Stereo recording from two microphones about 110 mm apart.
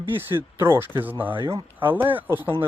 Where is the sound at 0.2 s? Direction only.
20° right (ahead or behind).